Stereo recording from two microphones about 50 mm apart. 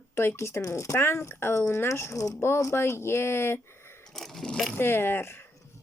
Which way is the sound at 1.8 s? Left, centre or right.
Left.